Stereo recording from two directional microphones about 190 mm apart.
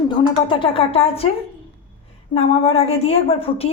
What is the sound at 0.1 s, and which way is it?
Speech, 25° left (ahead or behind).